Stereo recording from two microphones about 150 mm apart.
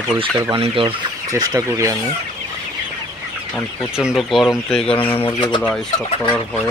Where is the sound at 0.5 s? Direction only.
35° right (ahead or behind).